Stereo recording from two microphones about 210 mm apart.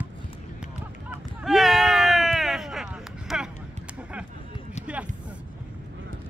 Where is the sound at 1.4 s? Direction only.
Centre (ahead or behind).